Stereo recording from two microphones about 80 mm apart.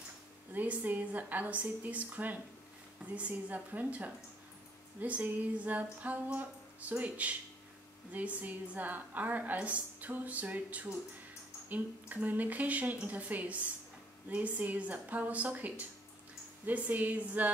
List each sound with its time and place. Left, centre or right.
0.5 s a woman's voice: right